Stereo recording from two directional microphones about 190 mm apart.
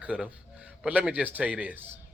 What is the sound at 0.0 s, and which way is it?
A man's voice, 5° right (ahead or behind).